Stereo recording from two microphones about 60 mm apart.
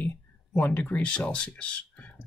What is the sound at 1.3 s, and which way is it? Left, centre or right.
Speech, centre.